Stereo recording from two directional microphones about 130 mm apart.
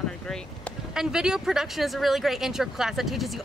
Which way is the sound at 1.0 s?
5° right (ahead or behind).